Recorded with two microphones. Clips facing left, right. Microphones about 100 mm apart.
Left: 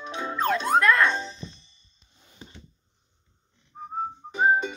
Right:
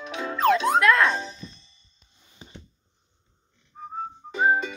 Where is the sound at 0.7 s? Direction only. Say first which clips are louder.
Right 1 dB; centre (ahead or behind).